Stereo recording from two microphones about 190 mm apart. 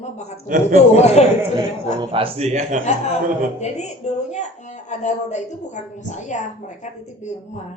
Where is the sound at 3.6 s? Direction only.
35° left (ahead or behind).